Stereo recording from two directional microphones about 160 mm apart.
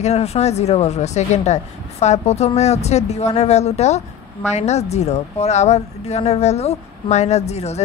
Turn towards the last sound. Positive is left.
turn(degrees=45)  # may be behind; listen again after turning